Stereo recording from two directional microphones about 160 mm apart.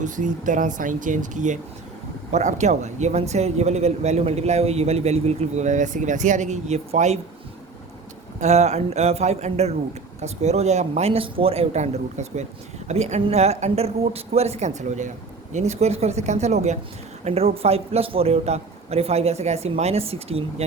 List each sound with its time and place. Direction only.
0.0 s speech: 55° right (ahead or behind)
8.4 s speech: 45° right (ahead or behind)